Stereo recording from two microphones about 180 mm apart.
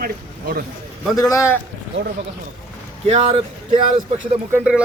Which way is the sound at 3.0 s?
35° right (ahead or behind).